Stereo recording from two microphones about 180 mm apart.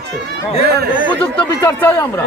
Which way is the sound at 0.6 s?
65° right (ahead or behind).